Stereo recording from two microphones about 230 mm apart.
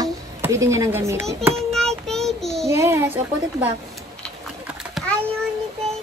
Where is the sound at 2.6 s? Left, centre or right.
Centre.